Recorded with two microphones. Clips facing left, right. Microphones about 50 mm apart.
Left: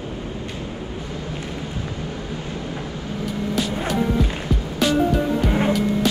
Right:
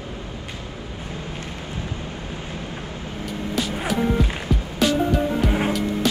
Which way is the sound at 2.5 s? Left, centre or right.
Right.